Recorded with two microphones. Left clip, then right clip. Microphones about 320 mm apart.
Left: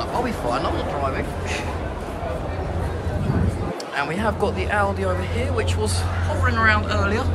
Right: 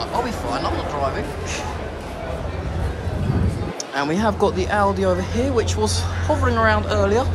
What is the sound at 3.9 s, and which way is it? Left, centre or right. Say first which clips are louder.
Speech: right 3 dB; centre.